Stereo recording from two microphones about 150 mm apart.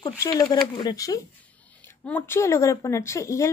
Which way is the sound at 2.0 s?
15° left (ahead or behind).